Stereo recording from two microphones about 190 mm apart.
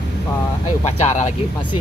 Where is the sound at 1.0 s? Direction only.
35° left (ahead or behind).